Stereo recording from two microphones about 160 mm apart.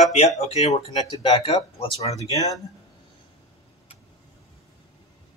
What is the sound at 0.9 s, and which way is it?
Speech, 30° left (ahead or behind).